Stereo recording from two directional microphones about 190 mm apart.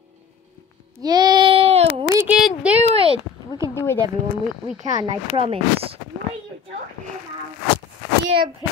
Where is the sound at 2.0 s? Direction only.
15° right (ahead or behind).